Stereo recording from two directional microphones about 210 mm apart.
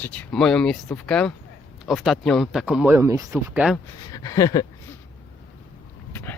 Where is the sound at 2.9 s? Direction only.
15° right (ahead or behind).